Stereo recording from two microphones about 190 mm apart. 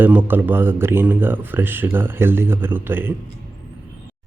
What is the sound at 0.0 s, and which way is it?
Speech, 10° right (ahead or behind).